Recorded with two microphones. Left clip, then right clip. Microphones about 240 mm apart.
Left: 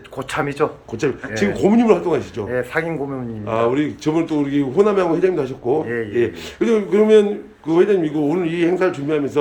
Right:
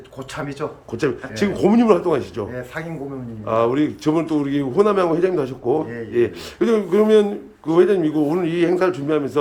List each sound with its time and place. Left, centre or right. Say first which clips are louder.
0.6 s speech: left 8 dB; left
0.9 s speech: right 1 dB; centre
3.4 s speech: even; centre